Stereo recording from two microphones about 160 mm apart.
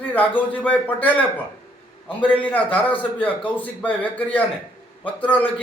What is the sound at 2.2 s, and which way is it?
A man's voice, 10° left (ahead or behind).